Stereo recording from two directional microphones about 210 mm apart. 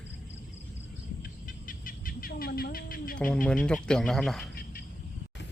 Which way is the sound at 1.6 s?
40° left (ahead or behind).